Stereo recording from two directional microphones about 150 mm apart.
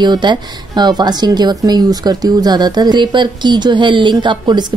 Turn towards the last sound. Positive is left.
turn(degrees=-30)  # may be behind; listen again after turning